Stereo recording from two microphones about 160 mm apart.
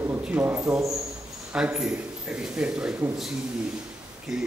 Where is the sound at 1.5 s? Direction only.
5° right (ahead or behind).